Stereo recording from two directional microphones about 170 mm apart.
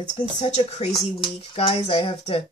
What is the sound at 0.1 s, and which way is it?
Speech, 45° left (ahead or behind).